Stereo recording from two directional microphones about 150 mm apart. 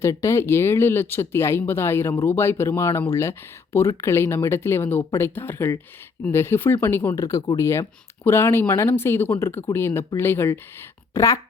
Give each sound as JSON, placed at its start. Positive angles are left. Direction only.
{"t": 0.0, "sound": "a woman's voice", "side_deg": 20}